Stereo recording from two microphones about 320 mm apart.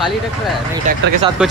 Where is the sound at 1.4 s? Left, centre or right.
Centre.